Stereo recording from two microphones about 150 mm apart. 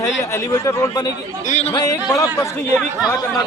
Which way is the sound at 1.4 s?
55° left (ahead or behind).